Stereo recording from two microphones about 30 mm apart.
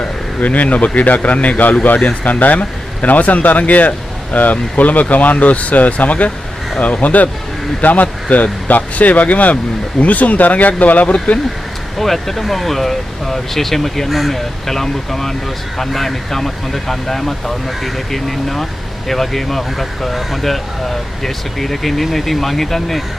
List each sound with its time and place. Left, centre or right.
0.4 s speech: left
12.0 s speech: centre
14.1 s speech: centre
14.7 s speech: centre